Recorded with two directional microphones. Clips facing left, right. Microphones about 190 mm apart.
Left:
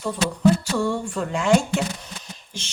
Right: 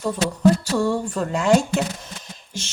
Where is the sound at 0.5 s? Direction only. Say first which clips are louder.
Right 2 dB; 35° right (ahead or behind).